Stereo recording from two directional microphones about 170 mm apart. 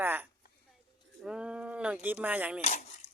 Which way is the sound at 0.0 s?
10° right (ahead or behind).